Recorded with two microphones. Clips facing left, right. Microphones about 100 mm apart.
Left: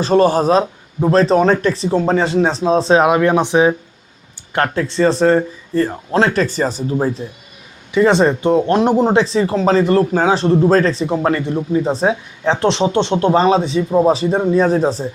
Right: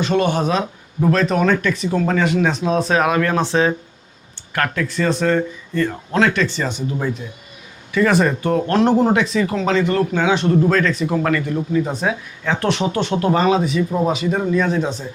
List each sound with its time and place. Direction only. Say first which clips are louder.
0.0 s speech: left 5 dB; 35° left (ahead or behind); by 3.8 s 15° left (ahead or behind)
4.5 s speech: left 4 dB; 30° left (ahead or behind)
9.1 s speech: left 4 dB; 30° left (ahead or behind)